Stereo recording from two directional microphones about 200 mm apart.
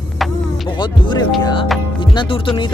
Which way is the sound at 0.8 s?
20° left (ahead or behind).